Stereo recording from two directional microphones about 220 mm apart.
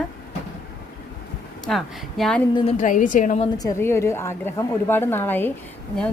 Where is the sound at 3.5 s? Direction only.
15° left (ahead or behind).